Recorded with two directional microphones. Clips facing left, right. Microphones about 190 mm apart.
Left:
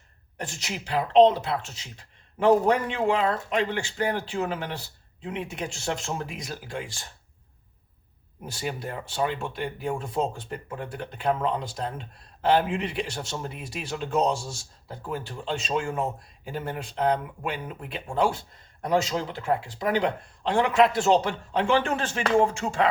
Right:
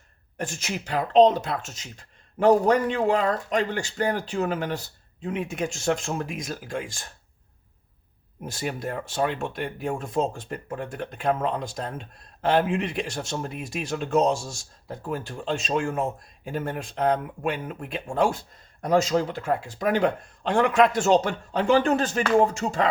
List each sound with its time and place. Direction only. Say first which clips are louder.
0.3 s speech: right 3 dB; 45° right (ahead or behind)
8.4 s speech: right 2 dB; 45° right (ahead or behind)